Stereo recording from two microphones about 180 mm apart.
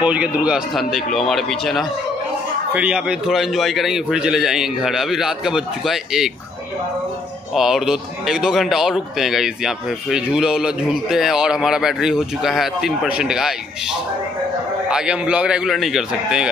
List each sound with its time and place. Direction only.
0.0 s a man's voice: 5° right (ahead or behind)
7.5 s a man's voice: centre (ahead or behind)
14.9 s a man's voice: 5° right (ahead or behind)